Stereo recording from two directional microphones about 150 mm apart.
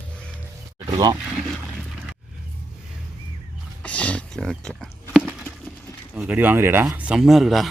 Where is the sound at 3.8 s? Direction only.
10° left (ahead or behind).